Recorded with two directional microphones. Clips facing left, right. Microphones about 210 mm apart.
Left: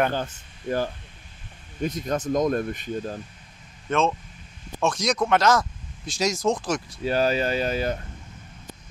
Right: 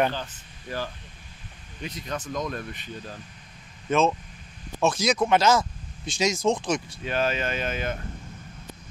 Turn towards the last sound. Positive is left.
turn(degrees=35)  # may be behind; listen again after turning